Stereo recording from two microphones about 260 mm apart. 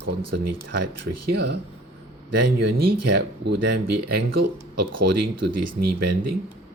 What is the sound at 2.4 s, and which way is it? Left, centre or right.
Speech, right.